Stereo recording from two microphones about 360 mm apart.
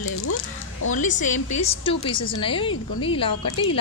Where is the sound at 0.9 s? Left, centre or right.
Left.